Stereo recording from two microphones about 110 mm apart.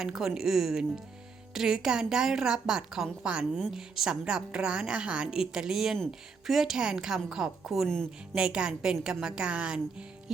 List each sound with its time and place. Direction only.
0.0 s a woman's voice: 5° right (ahead or behind)
8.4 s a woman's voice: 10° right (ahead or behind)